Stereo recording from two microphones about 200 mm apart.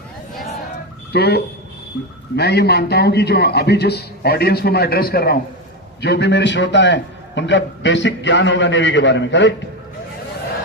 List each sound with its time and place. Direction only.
1.1 s a man's voice: 55° left (ahead or behind)